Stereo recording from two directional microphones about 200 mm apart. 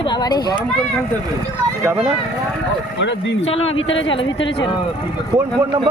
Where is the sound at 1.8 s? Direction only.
10° right (ahead or behind).